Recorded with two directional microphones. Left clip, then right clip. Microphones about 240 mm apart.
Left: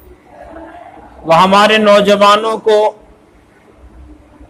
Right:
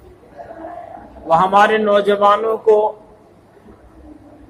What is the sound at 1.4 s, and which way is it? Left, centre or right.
Speech, left.